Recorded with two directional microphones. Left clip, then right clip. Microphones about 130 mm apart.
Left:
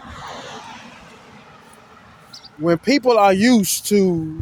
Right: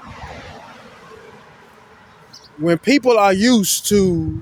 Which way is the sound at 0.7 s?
40° right (ahead or behind).